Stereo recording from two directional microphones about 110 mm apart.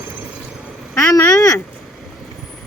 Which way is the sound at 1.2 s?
30° left (ahead or behind).